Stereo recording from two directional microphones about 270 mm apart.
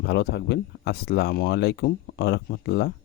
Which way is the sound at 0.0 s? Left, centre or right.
Left.